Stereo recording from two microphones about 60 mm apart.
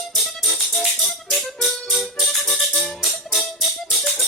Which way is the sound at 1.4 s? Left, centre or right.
Centre.